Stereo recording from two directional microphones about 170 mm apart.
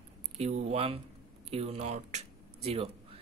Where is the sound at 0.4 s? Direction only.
40° right (ahead or behind).